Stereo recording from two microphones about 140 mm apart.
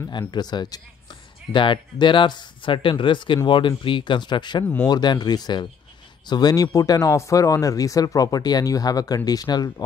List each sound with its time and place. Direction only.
0.3 s speech: 30° left (ahead or behind)